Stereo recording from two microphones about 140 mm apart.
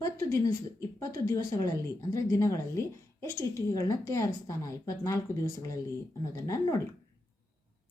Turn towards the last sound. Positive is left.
turn(degrees=25)  # may be behind; listen again after turning